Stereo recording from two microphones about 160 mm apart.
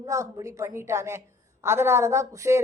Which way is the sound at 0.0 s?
20° right (ahead or behind).